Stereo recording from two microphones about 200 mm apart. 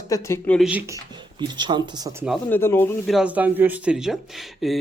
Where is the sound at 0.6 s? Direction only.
5° right (ahead or behind).